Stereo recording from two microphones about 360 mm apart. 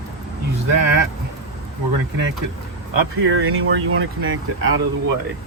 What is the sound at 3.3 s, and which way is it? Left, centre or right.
Speech, right.